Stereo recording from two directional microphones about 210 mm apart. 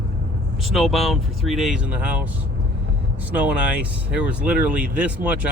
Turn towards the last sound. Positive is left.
turn(degrees=-5)  # may be behind; listen again after turning